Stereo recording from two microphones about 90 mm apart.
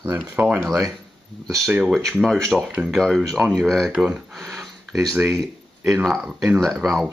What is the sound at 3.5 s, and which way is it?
Speech, 5° left (ahead or behind).